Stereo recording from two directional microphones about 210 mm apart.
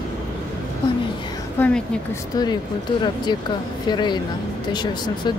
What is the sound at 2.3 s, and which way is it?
Speech, 20° left (ahead or behind).